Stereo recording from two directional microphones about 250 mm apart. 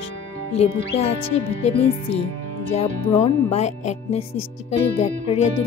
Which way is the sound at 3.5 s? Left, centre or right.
Left.